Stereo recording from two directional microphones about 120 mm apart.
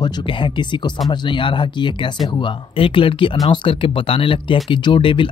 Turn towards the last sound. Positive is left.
turn(degrees=45)  # may be behind; listen again after turning